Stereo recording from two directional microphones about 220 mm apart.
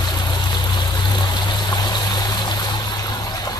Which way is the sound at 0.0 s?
20° left (ahead or behind).